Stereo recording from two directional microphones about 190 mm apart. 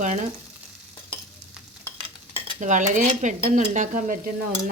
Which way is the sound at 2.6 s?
40° right (ahead or behind).